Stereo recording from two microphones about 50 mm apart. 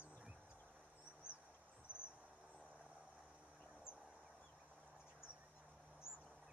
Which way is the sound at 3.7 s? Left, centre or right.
Centre.